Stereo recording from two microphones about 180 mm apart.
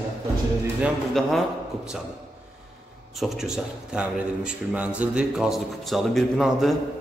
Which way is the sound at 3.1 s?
Centre (ahead or behind).